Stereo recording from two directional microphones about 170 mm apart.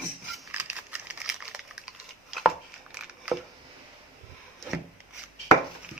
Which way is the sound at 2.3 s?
5° right (ahead or behind).